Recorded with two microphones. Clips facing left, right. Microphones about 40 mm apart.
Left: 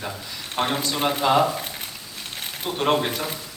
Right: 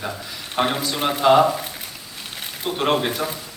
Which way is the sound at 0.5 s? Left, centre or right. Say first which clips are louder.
Right 2 dB; centre.